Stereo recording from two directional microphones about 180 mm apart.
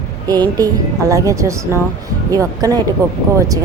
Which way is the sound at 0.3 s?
20° right (ahead or behind).